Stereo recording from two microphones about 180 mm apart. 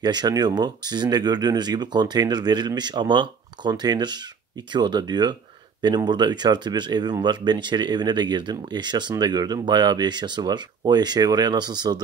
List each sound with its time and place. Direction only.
0.0 s speech: 25° right (ahead or behind)